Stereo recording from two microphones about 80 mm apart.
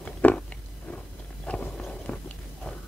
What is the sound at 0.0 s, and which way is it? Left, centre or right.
Biting, centre.